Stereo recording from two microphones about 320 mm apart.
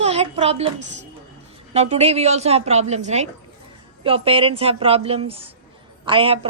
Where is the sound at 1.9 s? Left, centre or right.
Centre.